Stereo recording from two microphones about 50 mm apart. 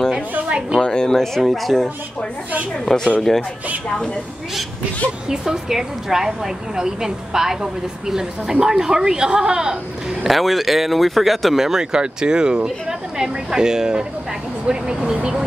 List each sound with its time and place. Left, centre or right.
0.7 s speech: centre
1.4 s speech: centre
3.9 s a woman's voice: centre
5.3 s a woman's voice: centre
10.2 s a woman's voice: centre